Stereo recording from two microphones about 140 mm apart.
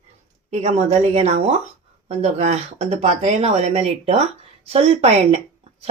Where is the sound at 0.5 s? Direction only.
55° right (ahead or behind).